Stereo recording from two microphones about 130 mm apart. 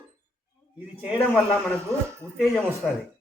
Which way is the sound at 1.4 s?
5° left (ahead or behind).